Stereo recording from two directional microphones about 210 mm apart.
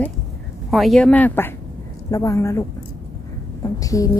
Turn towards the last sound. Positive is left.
turn(degrees=15)  # may be behind; listen again after turning